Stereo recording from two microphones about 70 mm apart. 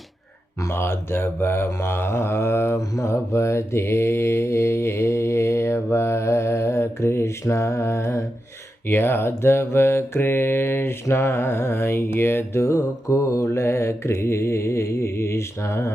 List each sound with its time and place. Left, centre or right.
0.7 s mantra: left